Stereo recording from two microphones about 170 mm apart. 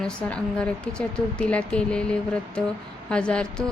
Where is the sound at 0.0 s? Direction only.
5° left (ahead or behind).